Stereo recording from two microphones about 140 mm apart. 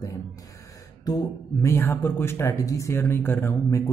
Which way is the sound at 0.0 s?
25° left (ahead or behind).